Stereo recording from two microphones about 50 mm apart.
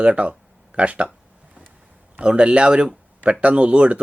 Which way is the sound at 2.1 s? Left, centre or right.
Right.